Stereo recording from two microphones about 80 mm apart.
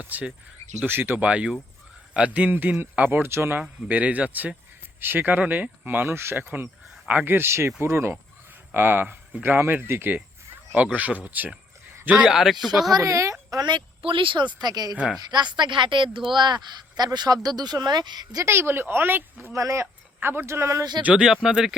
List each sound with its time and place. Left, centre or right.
0.0 s speech: centre
3.6 s speech: centre
10.9 s speech: centre
12.1 s speech: centre
12.9 s a woman's voice: right
13.7 s speech: right
15.3 s speech: right
18.4 s speech: right
19.5 s a woman's voice: right
20.1 s speech: right
21.0 s speech: centre